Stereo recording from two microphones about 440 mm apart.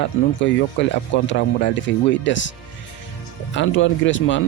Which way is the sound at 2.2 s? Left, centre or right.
Left.